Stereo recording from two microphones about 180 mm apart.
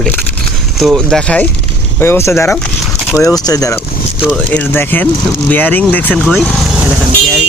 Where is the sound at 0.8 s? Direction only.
Centre (ahead or behind).